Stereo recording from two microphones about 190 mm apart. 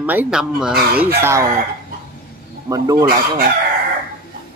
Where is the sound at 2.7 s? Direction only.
20° right (ahead or behind).